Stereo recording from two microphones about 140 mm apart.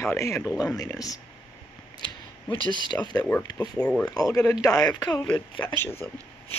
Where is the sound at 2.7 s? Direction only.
30° left (ahead or behind).